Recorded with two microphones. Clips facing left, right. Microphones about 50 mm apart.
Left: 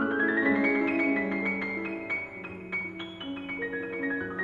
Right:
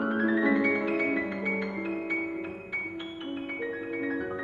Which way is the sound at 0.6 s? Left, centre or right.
Centre.